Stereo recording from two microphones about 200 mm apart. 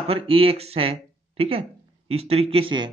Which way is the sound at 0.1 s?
30° right (ahead or behind).